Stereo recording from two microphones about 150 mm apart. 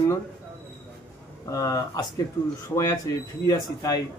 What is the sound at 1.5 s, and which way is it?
Speech, 25° left (ahead or behind).